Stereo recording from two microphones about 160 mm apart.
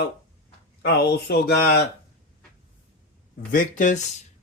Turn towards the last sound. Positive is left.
turn(degrees=55)  # may be behind; listen again after turning